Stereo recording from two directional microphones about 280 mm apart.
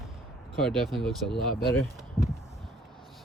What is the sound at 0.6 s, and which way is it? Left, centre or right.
Speech, centre.